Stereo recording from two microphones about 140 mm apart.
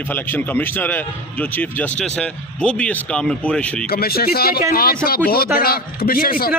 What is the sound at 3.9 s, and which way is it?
A man's voice, 90° left.